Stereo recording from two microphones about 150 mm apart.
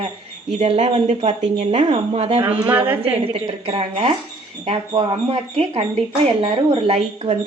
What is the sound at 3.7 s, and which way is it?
Speech, 40° right (ahead or behind).